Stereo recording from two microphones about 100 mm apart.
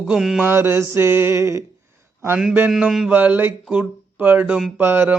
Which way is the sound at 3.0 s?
15° right (ahead or behind).